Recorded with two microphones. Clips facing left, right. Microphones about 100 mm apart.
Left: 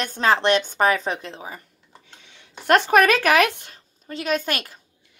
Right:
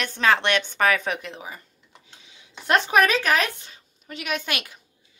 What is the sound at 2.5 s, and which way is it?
Speech, 50° left (ahead or behind).